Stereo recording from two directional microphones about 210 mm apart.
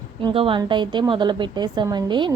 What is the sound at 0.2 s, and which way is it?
A woman's voice, 25° right (ahead or behind).